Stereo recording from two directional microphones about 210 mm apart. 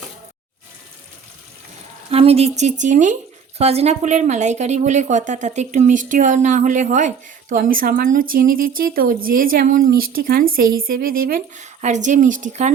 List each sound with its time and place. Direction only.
2.0 s a woman's voice: 30° right (ahead or behind)